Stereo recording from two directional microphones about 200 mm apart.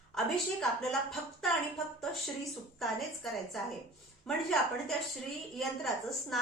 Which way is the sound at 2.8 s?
Centre (ahead or behind).